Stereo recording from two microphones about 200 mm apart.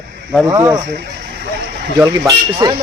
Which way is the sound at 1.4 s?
55° right (ahead or behind).